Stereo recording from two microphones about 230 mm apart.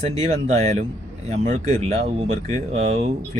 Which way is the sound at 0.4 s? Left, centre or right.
Right.